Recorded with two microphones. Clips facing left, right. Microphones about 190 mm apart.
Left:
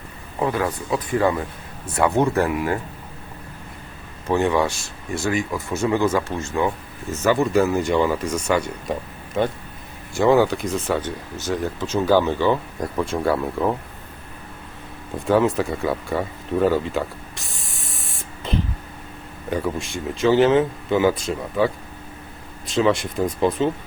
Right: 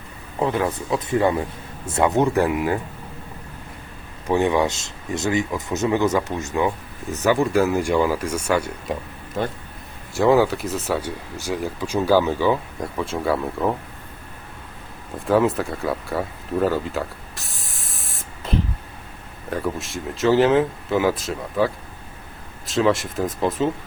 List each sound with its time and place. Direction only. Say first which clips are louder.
0.3 s speech: right 1 dB; 20° right (ahead or behind)
4.3 s speech: even; 15° right (ahead or behind)
10.2 s speech: even; centre (ahead or behind)
15.3 s a sound: even; centre (ahead or behind)
19.5 s speech: left 1 dB; centre (ahead or behind)